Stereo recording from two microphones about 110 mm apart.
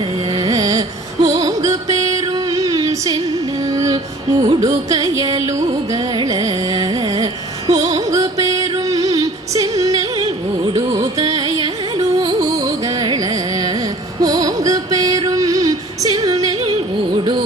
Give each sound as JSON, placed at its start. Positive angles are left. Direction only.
{"t": 0.3, "sound": "carnatic music", "side_deg": -40}
{"t": 3.7, "sound": "music", "side_deg": -30}
{"t": 5.9, "sound": "carnatic music", "side_deg": -35}
{"t": 7.7, "sound": "music", "side_deg": -35}